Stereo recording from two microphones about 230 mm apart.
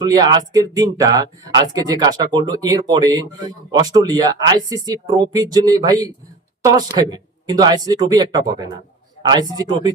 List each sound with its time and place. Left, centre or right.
0.0 s speech: centre